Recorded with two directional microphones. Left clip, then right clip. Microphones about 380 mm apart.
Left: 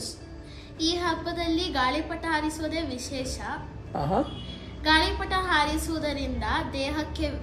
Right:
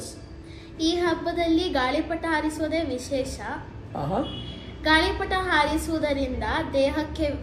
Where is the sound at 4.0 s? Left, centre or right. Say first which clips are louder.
Left 1 dB; left.